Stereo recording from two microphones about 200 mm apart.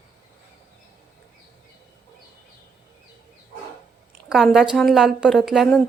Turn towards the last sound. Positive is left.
turn(degrees=0)  # may be behind; listen again after turning